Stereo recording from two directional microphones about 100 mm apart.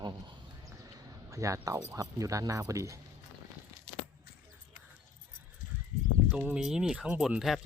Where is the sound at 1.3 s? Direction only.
30° right (ahead or behind).